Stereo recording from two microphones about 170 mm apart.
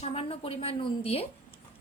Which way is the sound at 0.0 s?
35° left (ahead or behind).